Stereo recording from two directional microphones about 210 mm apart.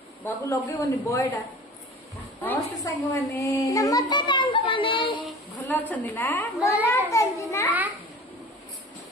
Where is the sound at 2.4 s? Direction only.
10° left (ahead or behind).